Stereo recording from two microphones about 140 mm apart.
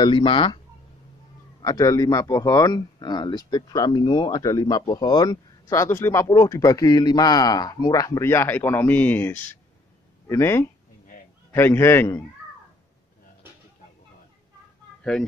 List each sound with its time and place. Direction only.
0.0 s speech: 35° left (ahead or behind)
1.6 s a man's voice: 25° left (ahead or behind)